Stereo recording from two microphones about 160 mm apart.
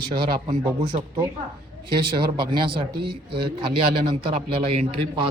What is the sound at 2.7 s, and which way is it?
Speech, 30° right (ahead or behind).